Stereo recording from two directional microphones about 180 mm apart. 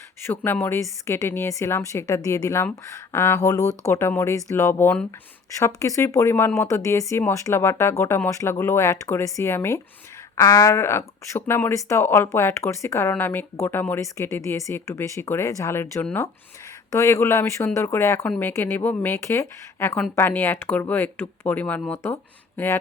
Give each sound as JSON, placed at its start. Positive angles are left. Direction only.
{"t": 0.3, "sound": "speech", "side_deg": 15}